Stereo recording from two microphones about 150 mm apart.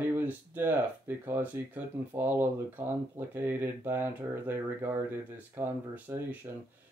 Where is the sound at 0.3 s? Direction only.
15° right (ahead or behind).